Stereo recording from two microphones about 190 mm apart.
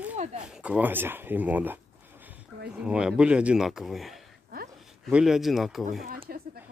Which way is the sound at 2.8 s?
5° right (ahead or behind).